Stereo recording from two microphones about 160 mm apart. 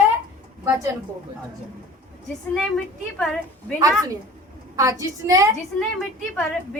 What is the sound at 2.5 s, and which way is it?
A woman's voice, centre (ahead or behind).